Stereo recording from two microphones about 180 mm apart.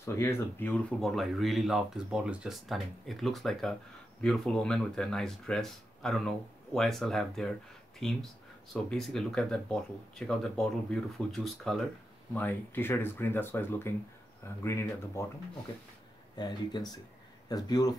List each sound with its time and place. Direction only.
0.0 s speech: 15° left (ahead or behind)
16.3 s speech: 25° left (ahead or behind)